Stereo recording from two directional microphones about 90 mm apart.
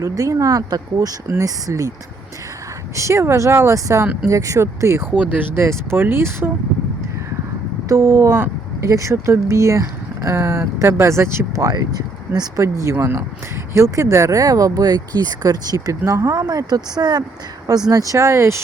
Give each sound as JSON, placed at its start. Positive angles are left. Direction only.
{"t": 0.0, "sound": "speech", "side_deg": -40}
{"t": 2.9, "sound": "speech", "side_deg": -35}
{"t": 5.1, "sound": "speech", "side_deg": -15}
{"t": 5.5, "sound": "speech", "side_deg": -25}
{"t": 7.9, "sound": "speech", "side_deg": -30}
{"t": 12.6, "sound": "speech", "side_deg": -30}